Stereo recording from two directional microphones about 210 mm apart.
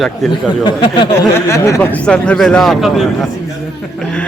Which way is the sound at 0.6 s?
20° left (ahead or behind).